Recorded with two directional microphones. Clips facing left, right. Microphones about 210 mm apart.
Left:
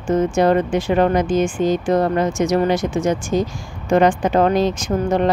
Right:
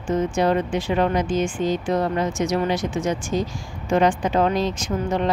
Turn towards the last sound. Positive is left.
turn(degrees=45)  # may be behind; listen again after turning